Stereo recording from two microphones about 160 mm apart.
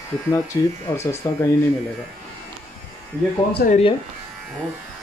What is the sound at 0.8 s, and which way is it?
Speech, 20° left (ahead or behind).